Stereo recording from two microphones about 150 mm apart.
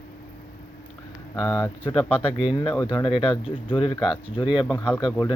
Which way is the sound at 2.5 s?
35° left (ahead or behind).